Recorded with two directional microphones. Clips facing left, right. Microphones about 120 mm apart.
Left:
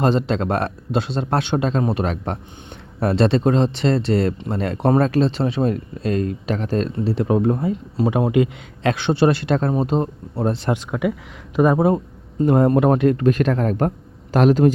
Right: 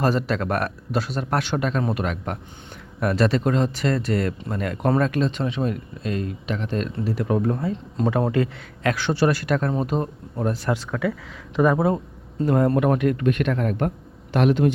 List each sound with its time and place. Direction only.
0.0 s speech: 25° left (ahead or behind)